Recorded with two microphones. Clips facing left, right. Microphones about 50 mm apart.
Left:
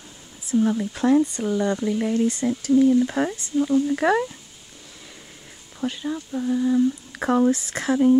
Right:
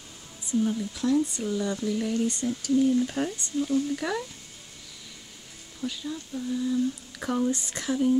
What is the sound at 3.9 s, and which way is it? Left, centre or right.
Speech, left.